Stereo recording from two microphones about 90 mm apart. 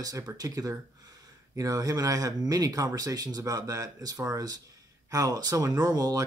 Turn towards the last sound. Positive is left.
turn(degrees=-45)  # may be behind; listen again after turning